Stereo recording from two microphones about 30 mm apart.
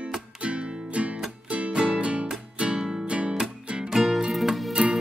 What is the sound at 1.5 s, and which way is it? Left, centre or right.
Music, right.